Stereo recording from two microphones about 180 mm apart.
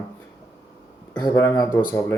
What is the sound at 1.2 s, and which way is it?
Speech, 20° left (ahead or behind).